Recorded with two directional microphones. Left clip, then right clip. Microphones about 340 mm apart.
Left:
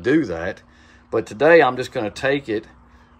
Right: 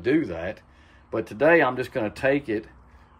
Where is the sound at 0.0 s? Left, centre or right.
Centre.